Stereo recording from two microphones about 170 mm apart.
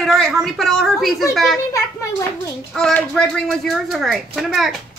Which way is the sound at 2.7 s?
5° left (ahead or behind).